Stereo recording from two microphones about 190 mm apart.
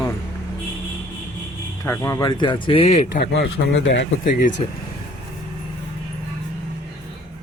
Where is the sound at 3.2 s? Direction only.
65° left (ahead or behind).